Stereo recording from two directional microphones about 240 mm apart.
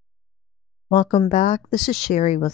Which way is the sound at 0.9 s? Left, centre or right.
Left.